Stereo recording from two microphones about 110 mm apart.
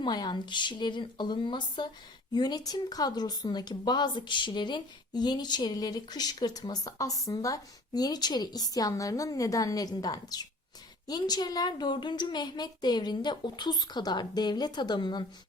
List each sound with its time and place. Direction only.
0.0 s speech: 40° left (ahead or behind)